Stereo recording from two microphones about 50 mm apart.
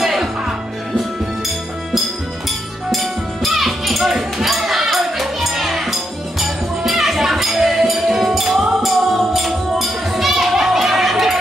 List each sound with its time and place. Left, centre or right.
0.0 s music: centre
2.9 s music: centre